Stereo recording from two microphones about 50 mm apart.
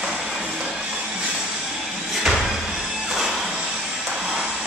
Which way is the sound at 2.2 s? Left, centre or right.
Centre.